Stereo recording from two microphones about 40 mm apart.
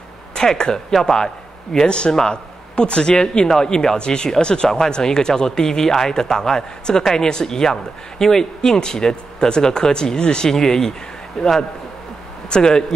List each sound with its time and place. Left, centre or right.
0.3 s a man's voice: centre
2.7 s a man's voice: left